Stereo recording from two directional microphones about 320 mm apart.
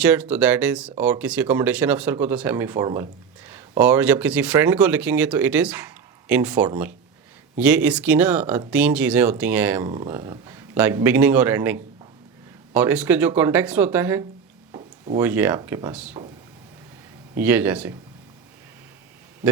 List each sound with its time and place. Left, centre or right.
0.0 s speech: centre
14.7 s a sound: centre
15.2 s speech: centre
17.3 s speech: centre